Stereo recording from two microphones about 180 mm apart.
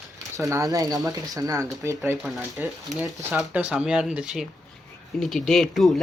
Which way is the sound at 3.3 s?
5° right (ahead or behind).